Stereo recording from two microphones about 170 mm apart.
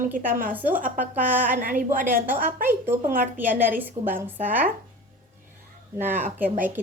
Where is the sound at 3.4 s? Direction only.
10° right (ahead or behind).